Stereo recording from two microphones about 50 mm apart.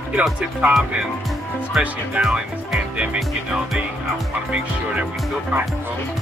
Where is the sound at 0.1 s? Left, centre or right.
Centre.